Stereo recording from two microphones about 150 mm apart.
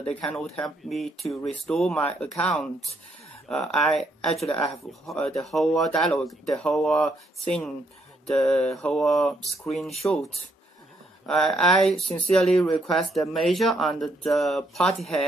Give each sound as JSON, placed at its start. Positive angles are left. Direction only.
{"t": 0.1, "sound": "speech", "side_deg": 10}
{"t": 4.5, "sound": "speech", "side_deg": 20}
{"t": 5.0, "sound": "speech", "side_deg": 5}
{"t": 11.2, "sound": "speech", "side_deg": 5}